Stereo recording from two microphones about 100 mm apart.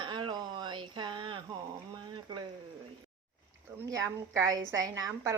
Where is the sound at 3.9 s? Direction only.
30° right (ahead or behind).